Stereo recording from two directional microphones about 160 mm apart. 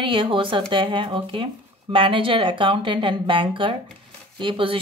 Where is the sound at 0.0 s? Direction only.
30° right (ahead or behind).